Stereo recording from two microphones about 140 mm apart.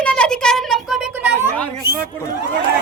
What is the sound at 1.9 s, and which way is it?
Speech, 90° right.